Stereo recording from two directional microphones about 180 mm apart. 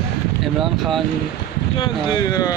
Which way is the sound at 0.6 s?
Centre (ahead or behind).